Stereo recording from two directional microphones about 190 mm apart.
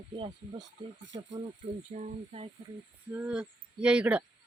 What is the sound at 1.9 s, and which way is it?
Speech, 35° right (ahead or behind).